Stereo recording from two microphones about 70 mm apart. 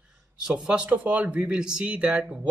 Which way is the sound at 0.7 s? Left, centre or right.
Centre.